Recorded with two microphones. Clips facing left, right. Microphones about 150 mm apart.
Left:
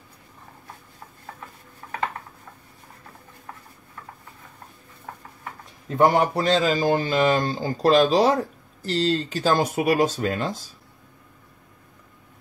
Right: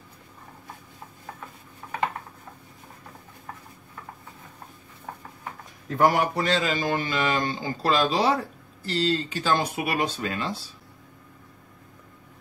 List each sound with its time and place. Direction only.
5.9 s speech: 25° left (ahead or behind)
6.3 s speech: 35° left (ahead or behind)